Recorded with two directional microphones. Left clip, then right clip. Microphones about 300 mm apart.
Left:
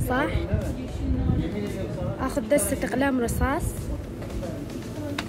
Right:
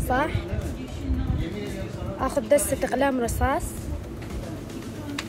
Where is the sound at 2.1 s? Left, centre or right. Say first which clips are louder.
Right 3 dB; centre.